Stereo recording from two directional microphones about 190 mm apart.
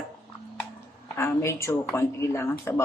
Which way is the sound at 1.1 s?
15° left (ahead or behind).